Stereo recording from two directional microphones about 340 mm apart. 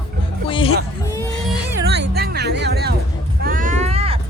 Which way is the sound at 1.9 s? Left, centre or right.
Right.